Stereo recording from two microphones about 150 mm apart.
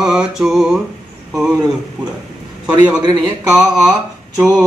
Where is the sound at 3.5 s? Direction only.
5° right (ahead or behind).